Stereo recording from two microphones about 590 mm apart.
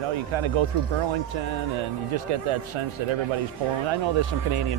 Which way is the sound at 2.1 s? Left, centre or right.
Right.